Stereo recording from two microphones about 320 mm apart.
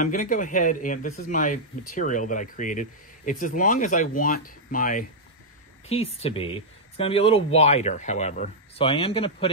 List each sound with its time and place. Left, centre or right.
0.0 s speech: left